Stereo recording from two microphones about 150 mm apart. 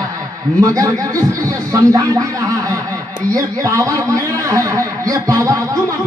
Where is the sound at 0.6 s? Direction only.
20° right (ahead or behind).